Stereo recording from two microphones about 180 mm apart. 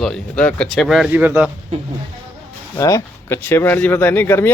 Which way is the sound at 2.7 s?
15° left (ahead or behind).